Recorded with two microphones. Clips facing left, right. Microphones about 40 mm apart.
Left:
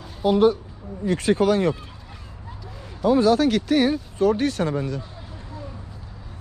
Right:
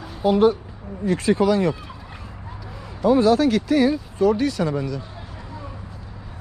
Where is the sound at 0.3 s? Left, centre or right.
Right.